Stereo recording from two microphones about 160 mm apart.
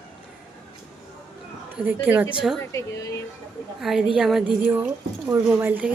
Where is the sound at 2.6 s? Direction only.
15° left (ahead or behind).